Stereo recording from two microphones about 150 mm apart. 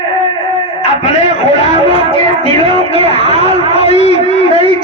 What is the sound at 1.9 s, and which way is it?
Child singing, 40° left (ahead or behind).